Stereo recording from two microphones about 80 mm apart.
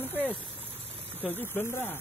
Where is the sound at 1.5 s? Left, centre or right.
Left.